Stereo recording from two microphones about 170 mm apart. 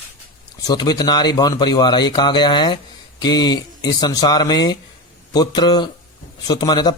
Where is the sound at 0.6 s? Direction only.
25° left (ahead or behind).